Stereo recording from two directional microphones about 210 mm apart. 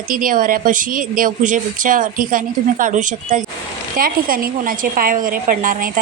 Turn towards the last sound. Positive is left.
turn(degrees=-40)  # may be behind; listen again after turning